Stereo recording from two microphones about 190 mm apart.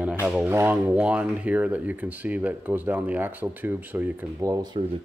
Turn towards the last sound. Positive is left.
turn(degrees=-20)  # may be behind; listen again after turning